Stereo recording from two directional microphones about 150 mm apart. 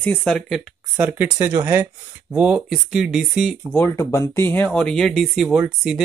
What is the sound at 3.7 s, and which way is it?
Speech, 15° left (ahead or behind).